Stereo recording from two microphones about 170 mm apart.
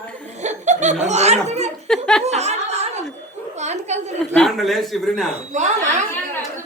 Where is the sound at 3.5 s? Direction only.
40° right (ahead or behind).